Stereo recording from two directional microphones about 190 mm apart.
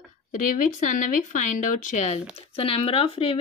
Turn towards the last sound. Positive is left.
turn(degrees=30)  # may be behind; listen again after turning